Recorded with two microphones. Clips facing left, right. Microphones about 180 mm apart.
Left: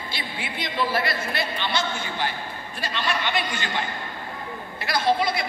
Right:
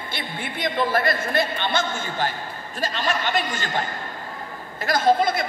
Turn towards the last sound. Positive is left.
turn(degrees=-50)  # may be behind; listen again after turning